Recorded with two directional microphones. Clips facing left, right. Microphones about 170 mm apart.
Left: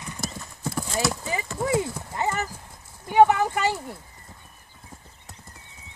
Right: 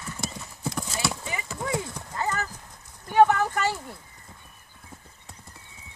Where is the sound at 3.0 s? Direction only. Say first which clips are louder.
Left 2 dB; 10° left (ahead or behind).